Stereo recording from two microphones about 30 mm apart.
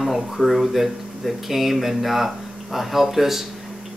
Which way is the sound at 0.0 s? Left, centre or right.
Centre.